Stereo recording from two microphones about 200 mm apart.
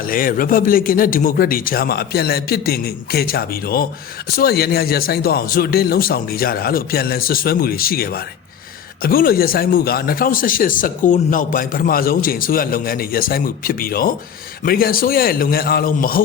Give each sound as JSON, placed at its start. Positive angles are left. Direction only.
{"t": 0.0, "sound": "a man's voice", "side_deg": 45}